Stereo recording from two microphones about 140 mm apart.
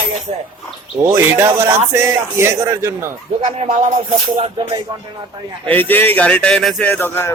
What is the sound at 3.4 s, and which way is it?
Speech, 65° right (ahead or behind).